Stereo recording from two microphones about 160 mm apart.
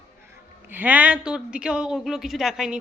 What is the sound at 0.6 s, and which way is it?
Speech, 10° right (ahead or behind).